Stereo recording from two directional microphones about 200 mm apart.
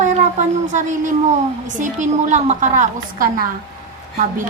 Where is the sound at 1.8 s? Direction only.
40° right (ahead or behind).